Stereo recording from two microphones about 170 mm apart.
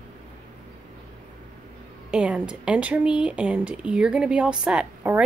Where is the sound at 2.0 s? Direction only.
5° right (ahead or behind).